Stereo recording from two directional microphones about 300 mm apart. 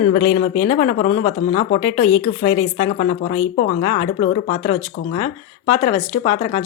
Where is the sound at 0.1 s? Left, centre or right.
Left.